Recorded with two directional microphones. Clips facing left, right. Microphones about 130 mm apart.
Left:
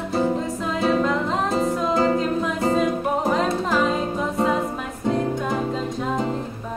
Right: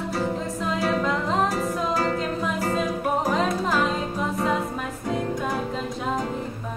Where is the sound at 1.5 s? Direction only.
25° left (ahead or behind).